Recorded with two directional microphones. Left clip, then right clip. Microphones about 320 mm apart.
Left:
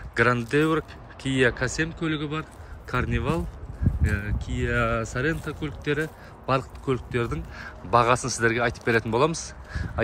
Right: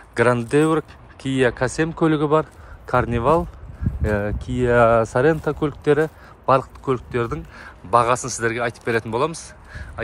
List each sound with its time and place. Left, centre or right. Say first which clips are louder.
0.1 s a man's voice: right 4 dB; centre